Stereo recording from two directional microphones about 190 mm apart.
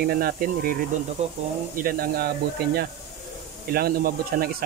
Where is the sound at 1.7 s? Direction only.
50° right (ahead or behind).